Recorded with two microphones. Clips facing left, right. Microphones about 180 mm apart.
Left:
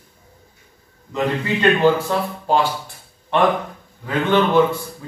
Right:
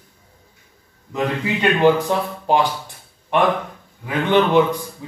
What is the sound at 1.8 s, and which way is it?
A man's voice, 15° right (ahead or behind).